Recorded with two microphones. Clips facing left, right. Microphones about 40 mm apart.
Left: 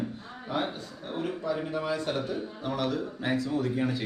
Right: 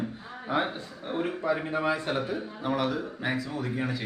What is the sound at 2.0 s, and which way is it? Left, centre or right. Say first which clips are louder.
Speech: right 1 dB; centre.